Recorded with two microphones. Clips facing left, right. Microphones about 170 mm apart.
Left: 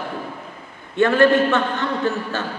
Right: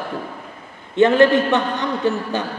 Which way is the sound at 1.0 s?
20° right (ahead or behind).